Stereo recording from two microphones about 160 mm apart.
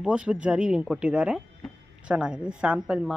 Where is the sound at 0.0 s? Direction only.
5° right (ahead or behind).